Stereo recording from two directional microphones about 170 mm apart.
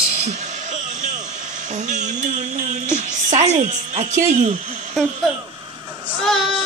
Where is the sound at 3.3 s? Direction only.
45° right (ahead or behind).